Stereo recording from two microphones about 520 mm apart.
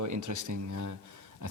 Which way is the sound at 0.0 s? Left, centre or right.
Right.